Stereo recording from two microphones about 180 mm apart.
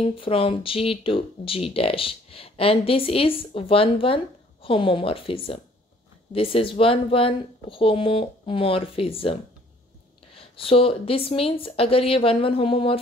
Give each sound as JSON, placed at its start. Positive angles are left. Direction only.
{"t": 0.0, "sound": "speech", "side_deg": 30}